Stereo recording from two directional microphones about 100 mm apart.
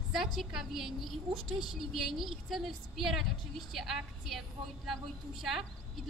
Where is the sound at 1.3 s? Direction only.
60° right (ahead or behind).